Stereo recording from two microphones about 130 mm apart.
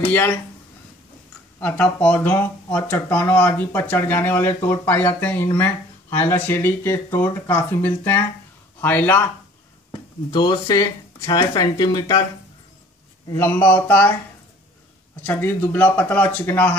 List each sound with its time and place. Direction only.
0.1 s speech: 15° left (ahead or behind)
1.6 s speech: 10° left (ahead or behind)
10.3 s speech: 35° left (ahead or behind)
13.3 s speech: 15° left (ahead or behind)
15.2 s speech: 15° left (ahead or behind)